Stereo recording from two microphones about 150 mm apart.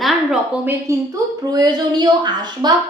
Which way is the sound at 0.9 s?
20° right (ahead or behind).